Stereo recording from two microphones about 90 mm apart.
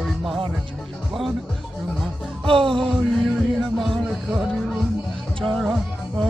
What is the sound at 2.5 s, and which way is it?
Music, 75° right (ahead or behind).